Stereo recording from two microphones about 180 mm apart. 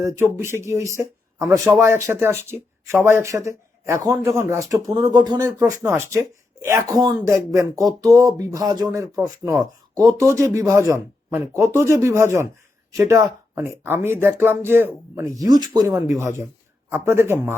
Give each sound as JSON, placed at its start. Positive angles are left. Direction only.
{"t": 0.0, "sound": "speech", "side_deg": -15}